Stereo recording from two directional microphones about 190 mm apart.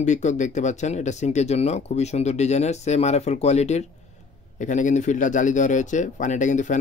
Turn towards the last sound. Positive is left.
turn(degrees=40)  # may be behind; listen again after turning